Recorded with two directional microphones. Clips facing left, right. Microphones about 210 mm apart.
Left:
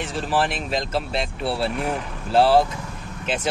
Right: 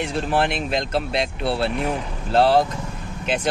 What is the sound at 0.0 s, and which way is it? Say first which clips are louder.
Speech: right 2 dB; centre (ahead or behind).